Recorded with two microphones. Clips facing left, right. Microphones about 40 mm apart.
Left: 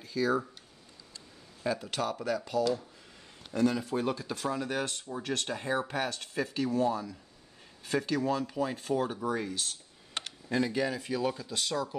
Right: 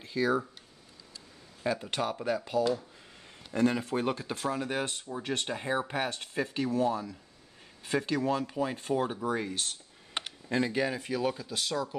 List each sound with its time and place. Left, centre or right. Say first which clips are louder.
0.0 s speech: right 1 dB; right
1.7 s speech: right 1 dB; right
3.5 s speech: right 1 dB; right
4.5 s speech: right 1 dB; centre
9.3 s speech: right 1 dB; right
10.1 s a sound: even; centre
11.1 s speech: right 1 dB; centre